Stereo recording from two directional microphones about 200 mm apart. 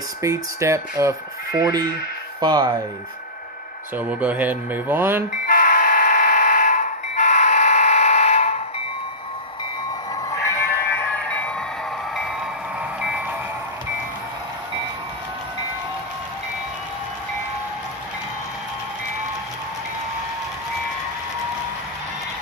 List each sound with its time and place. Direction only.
0.2 s speech: 15° right (ahead or behind)
3.9 s speech: 10° right (ahead or behind)
5.5 s vehicle: 45° left (ahead or behind)
10.3 s music: 15° left (ahead or behind)
13.0 s a sound: 5° right (ahead or behind)